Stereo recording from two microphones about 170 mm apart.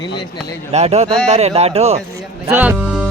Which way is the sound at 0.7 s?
40° right (ahead or behind).